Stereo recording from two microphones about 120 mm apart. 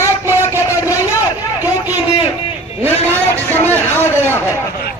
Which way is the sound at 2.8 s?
15° left (ahead or behind).